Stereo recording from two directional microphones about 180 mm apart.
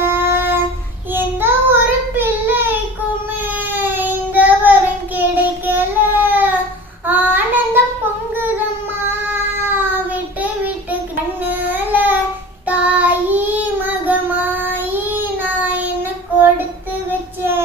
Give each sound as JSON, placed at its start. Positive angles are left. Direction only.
{"t": 0.0, "sound": "a sound", "side_deg": -10}
{"t": 1.1, "sound": "child singing", "side_deg": -10}
{"t": 9.3, "sound": "child singing", "side_deg": -10}